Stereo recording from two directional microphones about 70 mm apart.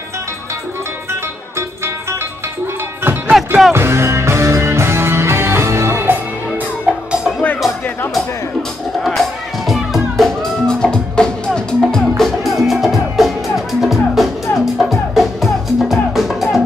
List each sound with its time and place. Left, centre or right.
3.0 s music: right
3.3 s music: centre
3.7 s music: right
6.9 s music: centre
9.7 s music: centre